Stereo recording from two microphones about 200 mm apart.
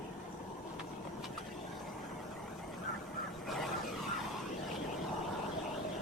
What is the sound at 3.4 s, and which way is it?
Vehicle, centre (ahead or behind).